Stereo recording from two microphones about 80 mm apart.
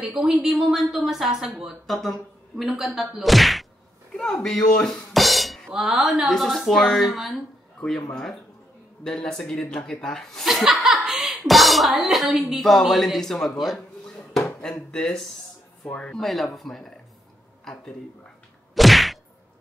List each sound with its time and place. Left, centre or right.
0.0 s speech: centre
12.3 s a woman's voice: centre
12.5 s speech: centre
18.8 s whack: centre